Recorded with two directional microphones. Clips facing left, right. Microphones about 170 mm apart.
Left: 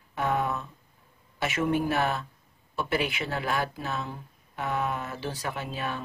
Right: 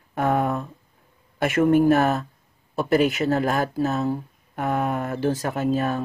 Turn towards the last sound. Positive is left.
turn(degrees=-45)  # may be behind; listen again after turning